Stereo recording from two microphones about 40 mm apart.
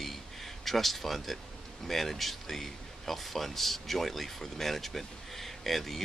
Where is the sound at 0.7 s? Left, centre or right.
Centre.